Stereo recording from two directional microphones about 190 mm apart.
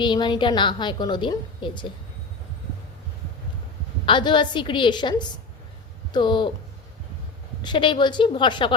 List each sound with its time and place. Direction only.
0.0 s a woman's voice: 25° left (ahead or behind)
4.0 s a woman's voice: 25° left (ahead or behind)
7.6 s a woman's voice: 25° left (ahead or behind)